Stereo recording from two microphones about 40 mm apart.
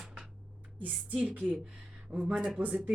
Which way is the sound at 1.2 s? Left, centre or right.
Right.